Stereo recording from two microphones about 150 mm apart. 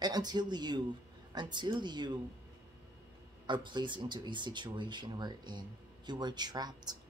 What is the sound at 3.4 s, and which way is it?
Speech, 30° right (ahead or behind).